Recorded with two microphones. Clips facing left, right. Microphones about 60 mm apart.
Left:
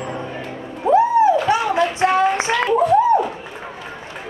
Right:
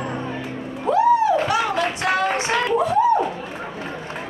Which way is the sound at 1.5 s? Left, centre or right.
Left.